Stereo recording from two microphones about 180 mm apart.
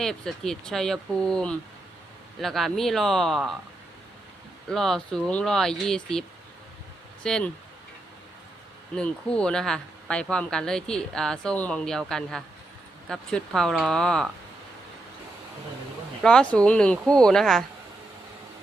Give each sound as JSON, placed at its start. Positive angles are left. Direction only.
{"t": 0.0, "sound": "speech", "side_deg": 5}
{"t": 4.7, "sound": "speech", "side_deg": 5}
{"t": 9.0, "sound": "speech", "side_deg": 5}
{"t": 16.2, "sound": "speech", "side_deg": 5}